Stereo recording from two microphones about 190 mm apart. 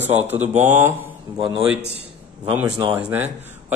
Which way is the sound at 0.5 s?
40° right (ahead or behind).